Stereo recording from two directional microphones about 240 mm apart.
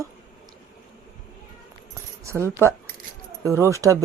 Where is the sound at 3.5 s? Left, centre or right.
Centre.